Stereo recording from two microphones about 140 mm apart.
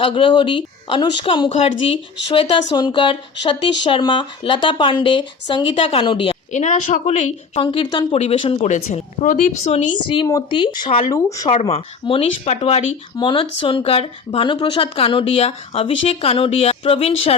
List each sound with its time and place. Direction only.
0.0 s speech: 35° left (ahead or behind)
6.5 s speech: 60° left (ahead or behind)
7.6 s speech: 40° left (ahead or behind)
8.6 s speech: 60° left (ahead or behind)
9.7 s speech: 35° left (ahead or behind)
11.1 s speech: 25° left (ahead or behind)
11.7 s speech: 40° left (ahead or behind)
13.1 s speech: 35° left (ahead or behind)